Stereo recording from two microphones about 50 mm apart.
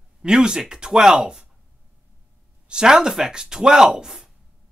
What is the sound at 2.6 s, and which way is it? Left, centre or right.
Speech, centre.